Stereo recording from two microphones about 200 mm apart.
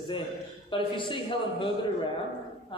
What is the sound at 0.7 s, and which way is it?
A man's voice, 25° left (ahead or behind).